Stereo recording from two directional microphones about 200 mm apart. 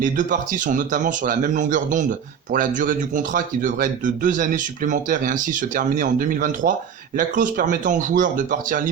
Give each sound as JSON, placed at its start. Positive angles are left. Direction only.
{"t": 0.0, "sound": "speech", "side_deg": -40}